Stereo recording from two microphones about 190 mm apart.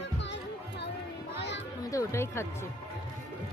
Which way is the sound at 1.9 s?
15° left (ahead or behind).